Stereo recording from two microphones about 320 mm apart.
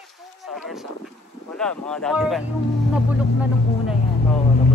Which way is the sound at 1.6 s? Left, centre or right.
Centre.